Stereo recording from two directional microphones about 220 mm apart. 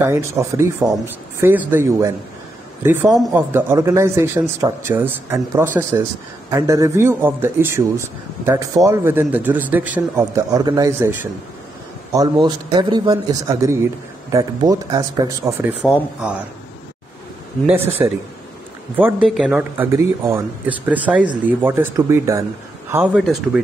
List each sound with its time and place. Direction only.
0.0 s a man's voice: 10° right (ahead or behind)
3.1 s speech: centre (ahead or behind)
3.5 s a man's voice: 10° right (ahead or behind)
15.8 s speech: 5° right (ahead or behind)
17.6 s a man's voice: 10° right (ahead or behind)